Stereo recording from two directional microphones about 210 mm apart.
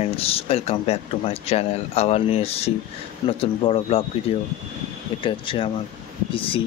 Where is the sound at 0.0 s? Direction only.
30° left (ahead or behind).